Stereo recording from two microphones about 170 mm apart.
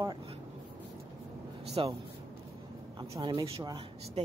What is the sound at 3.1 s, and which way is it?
Speech, 20° right (ahead or behind).